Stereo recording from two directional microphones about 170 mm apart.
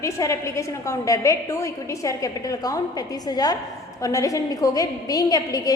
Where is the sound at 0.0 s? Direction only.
20° left (ahead or behind).